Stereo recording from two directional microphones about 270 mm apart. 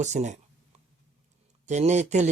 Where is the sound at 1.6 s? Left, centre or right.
Right.